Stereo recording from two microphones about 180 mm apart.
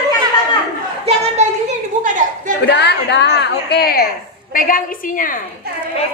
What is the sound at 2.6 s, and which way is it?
A woman's voice, 70° left (ahead or behind).